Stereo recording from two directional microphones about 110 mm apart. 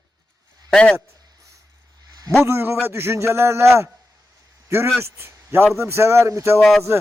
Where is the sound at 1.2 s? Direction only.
35° right (ahead or behind).